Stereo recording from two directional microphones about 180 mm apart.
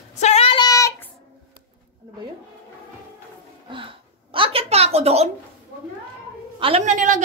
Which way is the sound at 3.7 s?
30° right (ahead or behind).